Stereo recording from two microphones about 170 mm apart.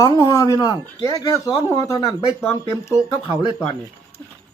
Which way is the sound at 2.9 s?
45° right (ahead or behind).